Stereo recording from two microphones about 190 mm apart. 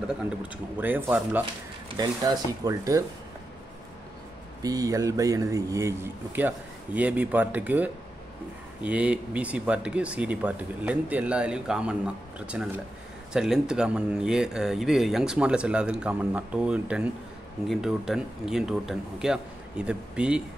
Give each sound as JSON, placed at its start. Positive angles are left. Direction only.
{"t": 0.7, "sound": "speech", "side_deg": -10}
{"t": 2.0, "sound": "speech", "side_deg": -20}
{"t": 4.6, "sound": "speech", "side_deg": -20}